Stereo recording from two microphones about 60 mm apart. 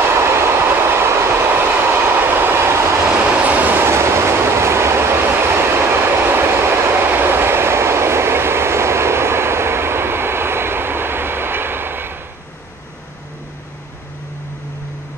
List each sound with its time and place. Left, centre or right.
0.2 s train: right
3.1 s train: centre
3.8 s train: right